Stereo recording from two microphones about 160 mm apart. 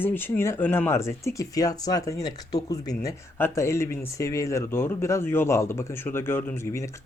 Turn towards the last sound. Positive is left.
turn(degrees=20)  # may be behind; listen again after turning